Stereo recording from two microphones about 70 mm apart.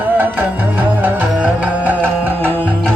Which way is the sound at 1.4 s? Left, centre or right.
Right.